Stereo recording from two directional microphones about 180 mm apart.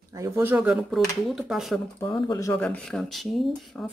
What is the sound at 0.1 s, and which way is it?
Speech, 15° right (ahead or behind).